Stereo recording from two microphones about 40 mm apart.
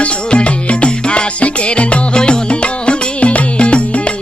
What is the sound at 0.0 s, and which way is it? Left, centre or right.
Music, left.